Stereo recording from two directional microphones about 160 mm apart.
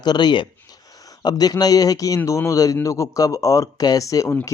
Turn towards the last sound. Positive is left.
turn(degrees=15)  # may be behind; listen again after turning